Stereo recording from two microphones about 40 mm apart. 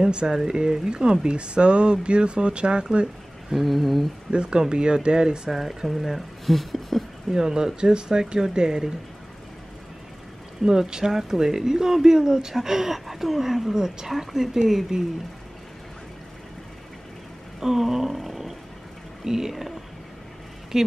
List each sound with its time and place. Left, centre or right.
0.0 s speech: right
3.5 s speech: centre
4.3 s speech: right
5.5 s speech: centre
7.2 s speech: centre
10.6 s speech: centre
17.6 s a sound: centre
19.2 s speech: centre
20.7 s speech: centre